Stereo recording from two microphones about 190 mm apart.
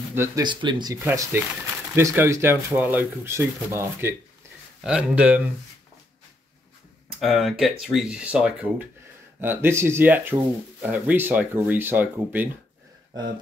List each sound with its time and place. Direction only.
0.1 s speech: 15° right (ahead or behind)
0.5 s speech: 25° right (ahead or behind); by 5.4 s 5° right (ahead or behind)
7.1 s speech: centre (ahead or behind)